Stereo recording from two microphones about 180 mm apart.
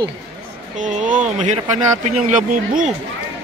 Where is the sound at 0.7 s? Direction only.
45° right (ahead or behind).